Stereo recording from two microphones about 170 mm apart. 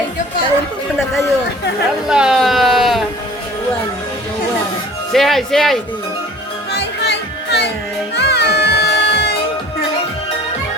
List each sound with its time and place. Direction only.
2.0 s speech: 5° right (ahead or behind)
5.1 s speech: centre (ahead or behind)
6.7 s music: 80° left